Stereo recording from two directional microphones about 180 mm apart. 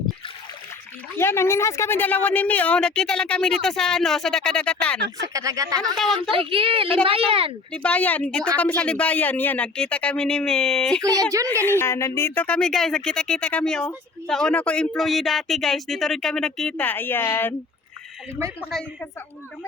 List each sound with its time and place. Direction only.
1.1 s speech: 15° left (ahead or behind)
5.3 s speech: 20° right (ahead or behind)
6.3 s speech: 30° right (ahead or behind)
7.7 s speech: 5° left (ahead or behind)
18.6 s speech: 5° left (ahead or behind)